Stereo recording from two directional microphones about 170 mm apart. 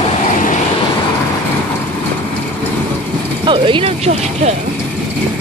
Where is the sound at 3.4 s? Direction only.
30° right (ahead or behind).